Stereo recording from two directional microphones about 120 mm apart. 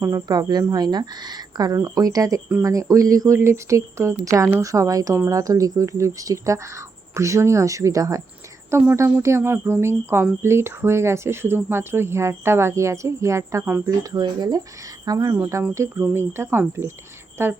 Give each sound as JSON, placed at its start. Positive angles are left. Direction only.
{"t": 0.0, "sound": "speech", "side_deg": -30}
{"t": 14.0, "sound": "speech", "side_deg": -30}